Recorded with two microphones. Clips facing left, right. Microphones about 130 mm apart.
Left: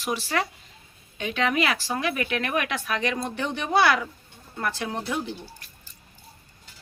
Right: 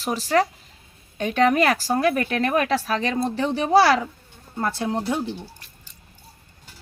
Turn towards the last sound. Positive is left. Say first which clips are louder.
# right 5 dB
turn(degrees=-30)  # may be behind; listen again after turning